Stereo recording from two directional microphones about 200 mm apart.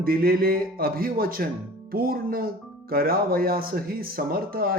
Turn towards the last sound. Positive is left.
turn(degrees=-50)  # may be behind; listen again after turning